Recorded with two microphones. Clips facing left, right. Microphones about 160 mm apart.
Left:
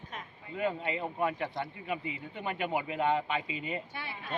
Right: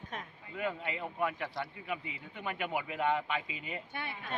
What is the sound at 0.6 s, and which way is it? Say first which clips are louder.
A man's voice: left 4 dB; 30° left (ahead or behind).